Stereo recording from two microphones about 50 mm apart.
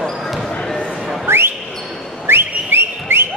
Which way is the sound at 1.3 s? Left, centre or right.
Right.